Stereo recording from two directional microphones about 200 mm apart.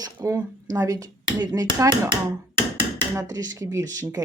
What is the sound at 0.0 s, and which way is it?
Speech, 15° right (ahead or behind).